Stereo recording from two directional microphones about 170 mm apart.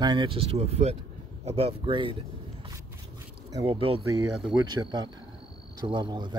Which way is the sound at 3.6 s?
35° right (ahead or behind).